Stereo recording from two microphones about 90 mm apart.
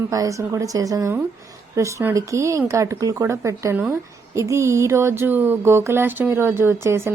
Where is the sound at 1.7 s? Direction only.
30° right (ahead or behind).